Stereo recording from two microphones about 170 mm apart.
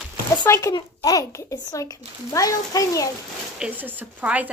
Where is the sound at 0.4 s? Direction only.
20° left (ahead or behind).